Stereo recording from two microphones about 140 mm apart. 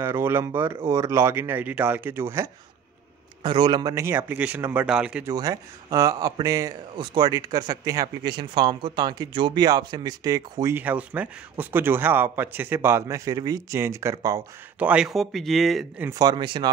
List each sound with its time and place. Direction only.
0.0 s speech: 15° right (ahead or behind)
3.4 s speech: 35° right (ahead or behind); by 5.2 s 5° right (ahead or behind)
5.2 s speech: 25° right (ahead or behind)
10.8 s speech: 10° right (ahead or behind)
14.8 s speech: 10° right (ahead or behind)
16.0 s speech: 25° right (ahead or behind)